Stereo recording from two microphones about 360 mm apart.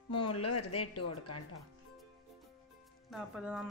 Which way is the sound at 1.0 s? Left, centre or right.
Left.